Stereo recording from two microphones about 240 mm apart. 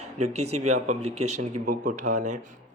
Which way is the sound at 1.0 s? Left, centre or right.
Right.